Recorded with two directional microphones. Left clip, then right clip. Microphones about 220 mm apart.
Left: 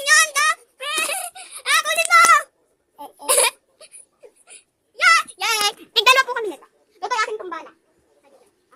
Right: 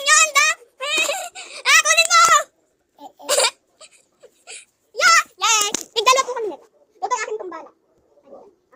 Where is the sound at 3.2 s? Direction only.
10° left (ahead or behind).